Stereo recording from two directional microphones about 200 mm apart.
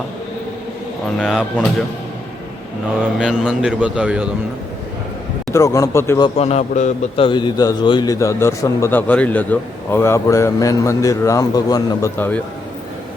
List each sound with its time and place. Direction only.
1.2 s a man's voice: 5° right (ahead or behind)
3.2 s a man's voice: centre (ahead or behind)
5.5 s a man's voice: 15° left (ahead or behind)
6.2 s a man's voice: 30° left (ahead or behind); by 12.4 s 10° left (ahead or behind)